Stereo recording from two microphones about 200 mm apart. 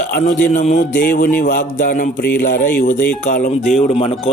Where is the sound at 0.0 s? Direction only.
40° left (ahead or behind).